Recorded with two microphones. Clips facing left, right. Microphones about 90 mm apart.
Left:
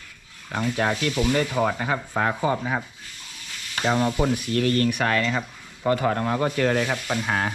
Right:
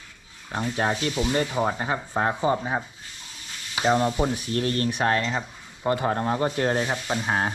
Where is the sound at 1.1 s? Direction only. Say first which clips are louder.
Left 2 dB; 15° right (ahead or behind).